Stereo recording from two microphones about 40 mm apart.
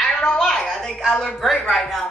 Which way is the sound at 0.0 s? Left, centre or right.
Centre.